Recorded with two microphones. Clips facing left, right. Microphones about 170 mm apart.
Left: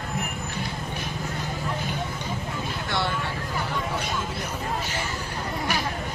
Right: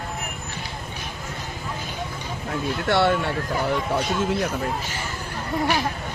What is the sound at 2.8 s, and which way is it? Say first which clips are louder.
Speech: right 9 dB; 65° right (ahead or behind).